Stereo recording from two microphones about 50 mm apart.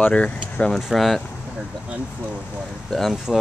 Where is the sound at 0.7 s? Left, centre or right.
Centre.